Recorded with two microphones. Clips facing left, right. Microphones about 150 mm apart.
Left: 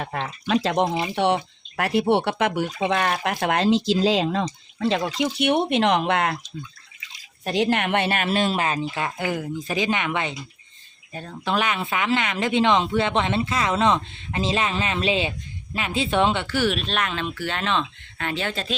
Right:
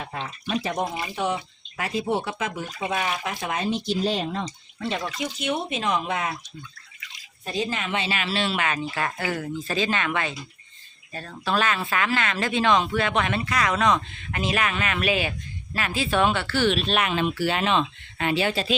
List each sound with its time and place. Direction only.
0.0 s speech: 75° left (ahead or behind)
0.8 s speech: 25° left (ahead or behind)
1.1 s speech: 70° left (ahead or behind); by 4.9 s 90° left
5.1 s speech: 80° left
7.4 s speech: 70° left (ahead or behind); by 8.9 s 30° left (ahead or behind)
9.0 s speech: 15° left (ahead or behind)
16.7 s speech: 5° right (ahead or behind)